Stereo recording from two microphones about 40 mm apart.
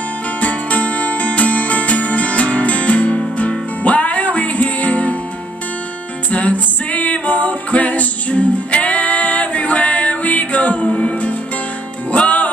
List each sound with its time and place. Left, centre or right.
0.4 s music: left
6.3 s music: left